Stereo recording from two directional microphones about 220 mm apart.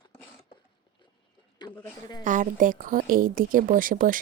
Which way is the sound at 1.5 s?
15° left (ahead or behind).